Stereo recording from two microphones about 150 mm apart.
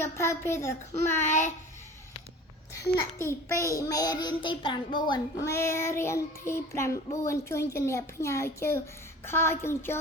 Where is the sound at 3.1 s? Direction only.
20° left (ahead or behind).